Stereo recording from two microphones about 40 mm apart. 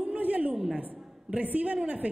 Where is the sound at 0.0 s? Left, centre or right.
Right.